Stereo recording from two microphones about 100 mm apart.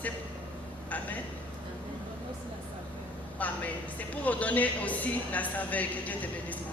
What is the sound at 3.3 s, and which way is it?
A man's voice, 15° left (ahead or behind).